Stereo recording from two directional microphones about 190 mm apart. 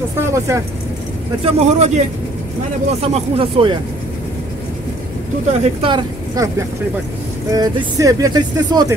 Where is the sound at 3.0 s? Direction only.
35° right (ahead or behind).